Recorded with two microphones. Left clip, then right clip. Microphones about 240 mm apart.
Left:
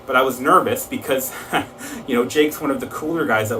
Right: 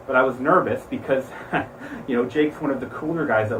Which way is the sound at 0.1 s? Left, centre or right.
Centre.